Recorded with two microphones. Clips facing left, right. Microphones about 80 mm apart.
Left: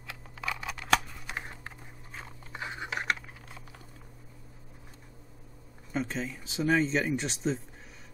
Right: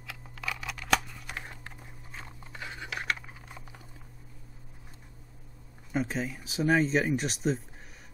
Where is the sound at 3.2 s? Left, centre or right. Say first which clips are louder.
Right 1 dB; centre.